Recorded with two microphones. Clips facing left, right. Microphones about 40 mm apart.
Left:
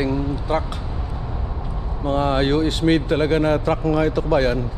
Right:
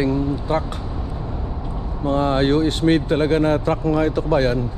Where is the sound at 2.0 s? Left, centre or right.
Left.